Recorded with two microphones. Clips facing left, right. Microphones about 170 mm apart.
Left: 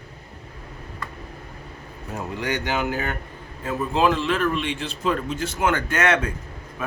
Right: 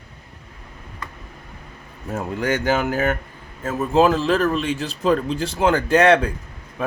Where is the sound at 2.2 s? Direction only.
45° right (ahead or behind).